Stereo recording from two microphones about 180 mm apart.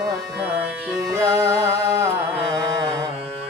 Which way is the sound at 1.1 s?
15° right (ahead or behind).